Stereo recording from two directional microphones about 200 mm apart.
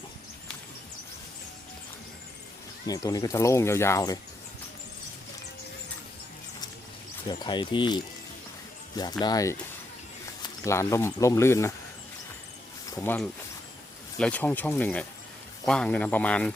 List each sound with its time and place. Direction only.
2.8 s speech: 20° left (ahead or behind)
7.3 s speech: 20° left (ahead or behind)
10.6 s speech: 15° left (ahead or behind)
12.9 s speech: 10° left (ahead or behind)